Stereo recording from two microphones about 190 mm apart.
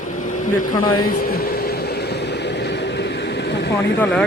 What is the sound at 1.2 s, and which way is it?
Vehicle, 50° left (ahead or behind).